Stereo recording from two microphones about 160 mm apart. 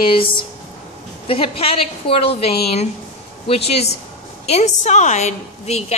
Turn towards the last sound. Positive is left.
turn(degrees=45)  # may be behind; listen again after turning